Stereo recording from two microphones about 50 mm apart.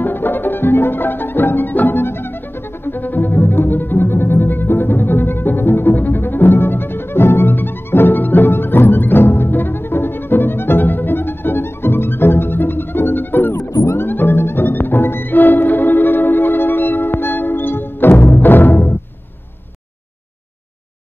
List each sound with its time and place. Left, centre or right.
0.0 s music: left